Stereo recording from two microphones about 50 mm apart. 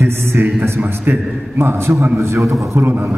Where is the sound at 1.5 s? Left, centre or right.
Right.